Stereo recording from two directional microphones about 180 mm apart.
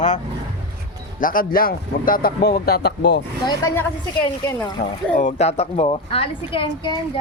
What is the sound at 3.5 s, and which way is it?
Speech, 15° left (ahead or behind).